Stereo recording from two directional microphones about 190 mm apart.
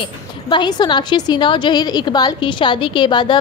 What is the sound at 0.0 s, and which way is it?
A woman's voice, 25° left (ahead or behind).